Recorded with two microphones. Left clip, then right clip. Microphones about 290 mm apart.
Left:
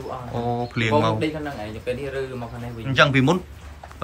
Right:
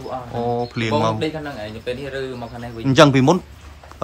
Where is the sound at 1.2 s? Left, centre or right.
Right.